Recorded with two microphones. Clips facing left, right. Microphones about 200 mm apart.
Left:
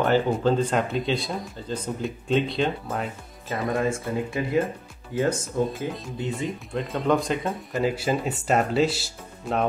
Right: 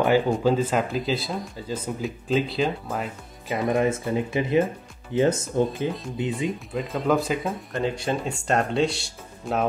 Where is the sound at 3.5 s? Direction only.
20° right (ahead or behind).